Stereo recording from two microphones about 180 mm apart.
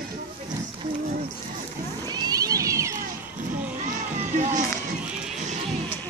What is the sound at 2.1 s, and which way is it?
Cat, 20° right (ahead or behind).